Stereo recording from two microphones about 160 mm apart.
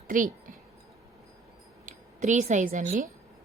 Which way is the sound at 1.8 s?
45° right (ahead or behind).